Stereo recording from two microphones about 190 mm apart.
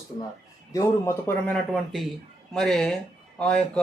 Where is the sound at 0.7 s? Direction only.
15° left (ahead or behind).